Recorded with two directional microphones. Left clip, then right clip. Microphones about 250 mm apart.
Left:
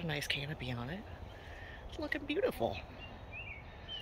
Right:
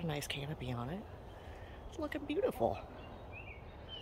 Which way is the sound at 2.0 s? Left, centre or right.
Centre.